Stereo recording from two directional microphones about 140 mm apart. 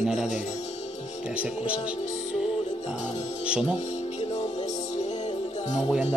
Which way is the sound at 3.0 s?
55° left (ahead or behind).